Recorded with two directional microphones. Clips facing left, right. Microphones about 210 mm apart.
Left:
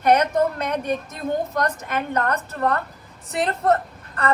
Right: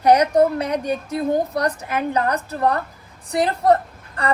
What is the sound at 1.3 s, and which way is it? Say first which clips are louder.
Speech: right 2 dB; 35° right (ahead or behind).